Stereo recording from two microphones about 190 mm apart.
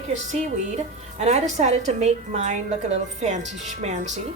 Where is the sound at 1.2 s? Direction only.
35° right (ahead or behind).